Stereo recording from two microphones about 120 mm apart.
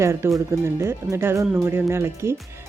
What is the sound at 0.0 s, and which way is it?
Speech, 25° right (ahead or behind).